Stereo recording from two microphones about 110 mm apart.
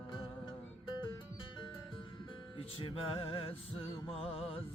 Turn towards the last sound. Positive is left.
turn(degrees=65)  # may be behind; listen again after turning